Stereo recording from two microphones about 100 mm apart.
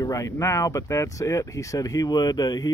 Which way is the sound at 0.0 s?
35° left (ahead or behind).